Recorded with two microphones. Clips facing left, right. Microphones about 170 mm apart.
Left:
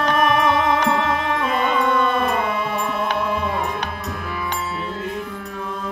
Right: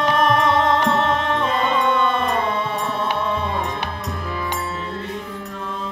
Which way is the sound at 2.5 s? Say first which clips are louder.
Even; 30° right (ahead or behind).